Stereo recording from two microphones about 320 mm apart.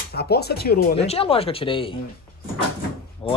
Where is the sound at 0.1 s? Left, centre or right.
Left.